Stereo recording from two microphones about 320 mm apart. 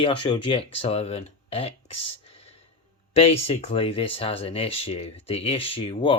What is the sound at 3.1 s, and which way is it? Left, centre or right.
Speech, centre.